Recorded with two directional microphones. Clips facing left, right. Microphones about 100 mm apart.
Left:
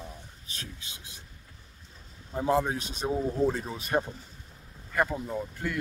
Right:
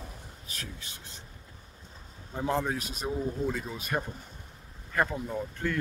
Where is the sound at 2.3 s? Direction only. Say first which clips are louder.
Left 3 dB; 10° left (ahead or behind).